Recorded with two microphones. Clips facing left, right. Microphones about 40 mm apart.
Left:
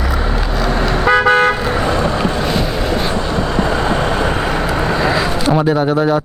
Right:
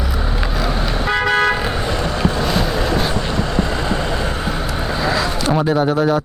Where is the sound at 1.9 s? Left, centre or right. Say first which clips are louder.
Left 5 dB; left.